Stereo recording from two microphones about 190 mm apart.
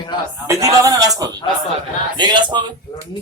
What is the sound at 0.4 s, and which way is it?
Speech, 15° right (ahead or behind).